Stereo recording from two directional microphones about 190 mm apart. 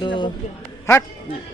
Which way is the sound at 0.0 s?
25° left (ahead or behind).